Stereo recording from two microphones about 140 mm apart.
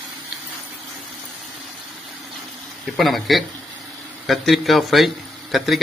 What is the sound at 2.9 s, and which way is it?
A man's voice, centre (ahead or behind).